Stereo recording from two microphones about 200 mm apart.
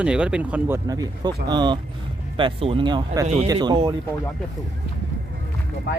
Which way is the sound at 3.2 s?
30° right (ahead or behind).